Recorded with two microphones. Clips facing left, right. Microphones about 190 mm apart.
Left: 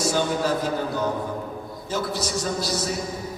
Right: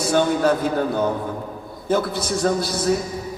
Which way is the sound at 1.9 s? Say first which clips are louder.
Right 6 dB; 55° right (ahead or behind).